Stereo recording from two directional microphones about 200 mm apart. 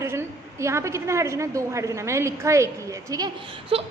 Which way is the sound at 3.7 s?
30° right (ahead or behind).